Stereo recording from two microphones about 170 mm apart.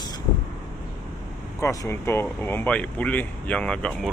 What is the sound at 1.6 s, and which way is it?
Speech, 15° left (ahead or behind).